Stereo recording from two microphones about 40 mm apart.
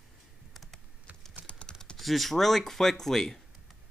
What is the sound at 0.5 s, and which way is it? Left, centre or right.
Computer keyboard, centre.